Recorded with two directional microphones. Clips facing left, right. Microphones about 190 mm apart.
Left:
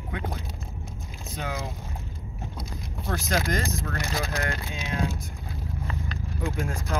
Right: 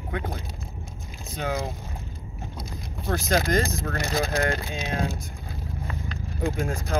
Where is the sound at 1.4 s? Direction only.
35° right (ahead or behind).